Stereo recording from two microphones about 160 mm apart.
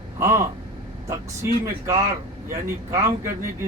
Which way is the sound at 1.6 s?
20° right (ahead or behind).